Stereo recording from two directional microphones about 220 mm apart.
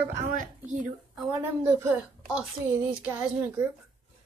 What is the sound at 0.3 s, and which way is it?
Speech, 35° right (ahead or behind).